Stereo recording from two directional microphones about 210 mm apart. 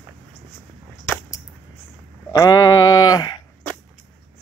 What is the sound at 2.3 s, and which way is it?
Sheep, 20° left (ahead or behind).